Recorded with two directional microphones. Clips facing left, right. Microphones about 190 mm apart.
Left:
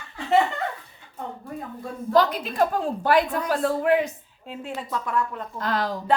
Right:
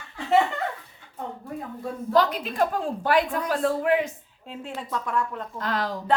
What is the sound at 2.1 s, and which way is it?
A woman's voice, 35° left (ahead or behind).